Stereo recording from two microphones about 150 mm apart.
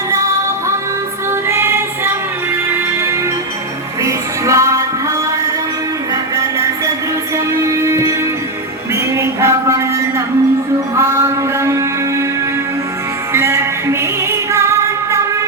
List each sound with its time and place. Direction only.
1.3 s music: 15° right (ahead or behind)
6.3 s music: 20° right (ahead or behind)
9.1 s a sound: 20° right (ahead or behind)
10.9 s mantra: 20° right (ahead or behind)
13.3 s music: 15° right (ahead or behind)